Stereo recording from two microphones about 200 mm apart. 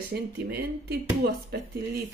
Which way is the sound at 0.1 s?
55° right (ahead or behind).